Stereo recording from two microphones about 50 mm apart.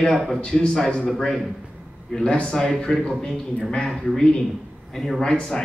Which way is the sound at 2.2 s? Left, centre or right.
Centre.